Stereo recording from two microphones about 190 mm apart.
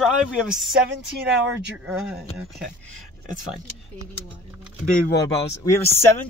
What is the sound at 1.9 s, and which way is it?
Speech, 5° right (ahead or behind).